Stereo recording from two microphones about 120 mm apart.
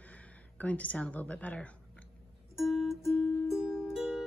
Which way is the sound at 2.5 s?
Centre (ahead or behind).